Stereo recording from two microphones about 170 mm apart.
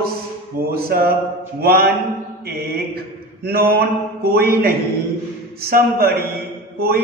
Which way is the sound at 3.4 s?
65° right (ahead or behind).